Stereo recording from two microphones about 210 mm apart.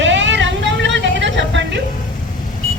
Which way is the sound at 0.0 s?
60° right (ahead or behind).